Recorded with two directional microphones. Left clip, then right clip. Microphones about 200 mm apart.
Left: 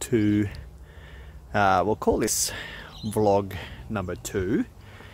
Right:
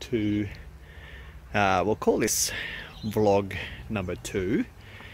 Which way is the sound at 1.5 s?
5° left (ahead or behind).